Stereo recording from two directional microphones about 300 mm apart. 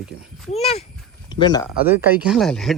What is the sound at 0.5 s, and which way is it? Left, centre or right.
A child's voice, left.